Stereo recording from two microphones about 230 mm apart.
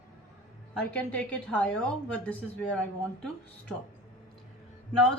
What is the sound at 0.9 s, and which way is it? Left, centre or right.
A woman's voice, centre.